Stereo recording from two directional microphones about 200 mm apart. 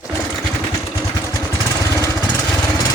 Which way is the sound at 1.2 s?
15° left (ahead or behind).